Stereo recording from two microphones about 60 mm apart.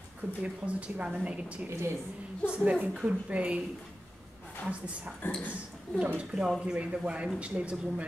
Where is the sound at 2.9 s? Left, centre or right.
Centre.